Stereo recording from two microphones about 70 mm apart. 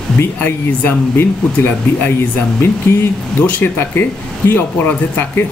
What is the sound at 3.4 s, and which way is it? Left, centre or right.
A man's voice, left.